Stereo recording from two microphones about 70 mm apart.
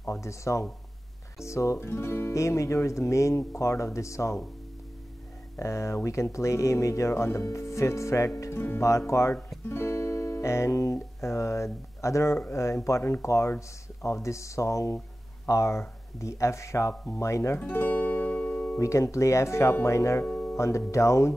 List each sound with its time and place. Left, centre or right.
0.0 s speech: left
1.9 s music: left
2.3 s speech: left
5.6 s speech: left
8.5 s music: left
8.8 s speech: left
9.7 s music: left
12.4 s speech: left
17.6 s music: left
18.8 s speech: left
20.2 s music: centre
20.5 s speech: left